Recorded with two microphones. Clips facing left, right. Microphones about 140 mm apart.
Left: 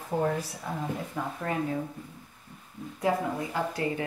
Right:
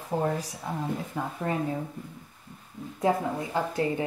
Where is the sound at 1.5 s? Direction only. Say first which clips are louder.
Right 1 dB; 25° right (ahead or behind).